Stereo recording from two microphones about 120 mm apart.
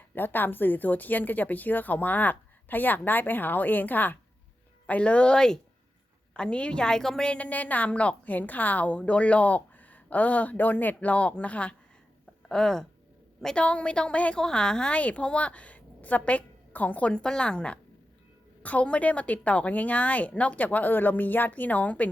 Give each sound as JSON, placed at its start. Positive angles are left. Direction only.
{"t": 0.1, "sound": "a woman's voice", "side_deg": 15}